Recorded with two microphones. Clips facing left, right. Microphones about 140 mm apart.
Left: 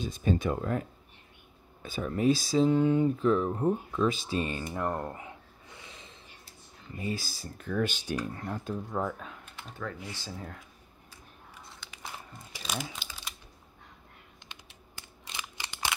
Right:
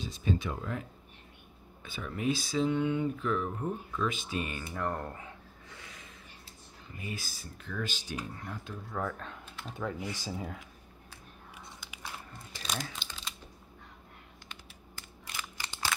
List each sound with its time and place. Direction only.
0.0 s speech: 50° left (ahead or behind); by 4.6 s 30° left (ahead or behind)
4.7 s a sound: 20° left (ahead or behind)
7.0 s speech: 30° left (ahead or behind)
7.6 s speech: 50° left (ahead or behind)
9.0 s speech: 25° left (ahead or behind)
9.8 s speech: 15° right (ahead or behind)
12.3 s crumpling: 5° left (ahead or behind)
14.5 s computer keyboard: 20° left (ahead or behind)
15.3 s scissors: 20° left (ahead or behind)